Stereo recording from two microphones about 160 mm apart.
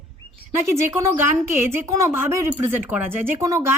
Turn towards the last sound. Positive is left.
turn(degrees=-20)  # may be behind; listen again after turning